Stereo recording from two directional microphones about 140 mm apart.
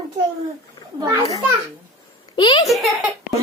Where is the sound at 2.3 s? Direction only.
30° left (ahead or behind).